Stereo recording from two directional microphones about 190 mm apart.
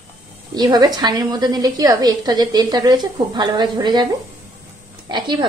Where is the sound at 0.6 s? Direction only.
20° right (ahead or behind).